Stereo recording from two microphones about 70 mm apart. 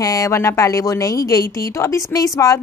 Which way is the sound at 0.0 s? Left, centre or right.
Left.